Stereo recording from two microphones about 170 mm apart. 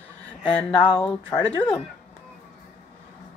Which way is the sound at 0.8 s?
5° left (ahead or behind).